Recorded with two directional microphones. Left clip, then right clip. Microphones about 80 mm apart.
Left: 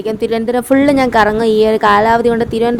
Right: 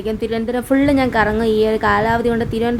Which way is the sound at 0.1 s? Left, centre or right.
Left.